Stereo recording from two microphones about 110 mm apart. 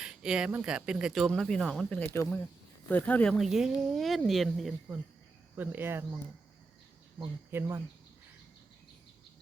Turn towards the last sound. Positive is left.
turn(degrees=-20)  # may be behind; listen again after turning